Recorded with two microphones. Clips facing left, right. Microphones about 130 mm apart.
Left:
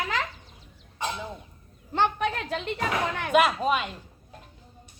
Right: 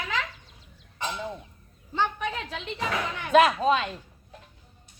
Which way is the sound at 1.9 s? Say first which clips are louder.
Left 3 dB; 65° left (ahead or behind).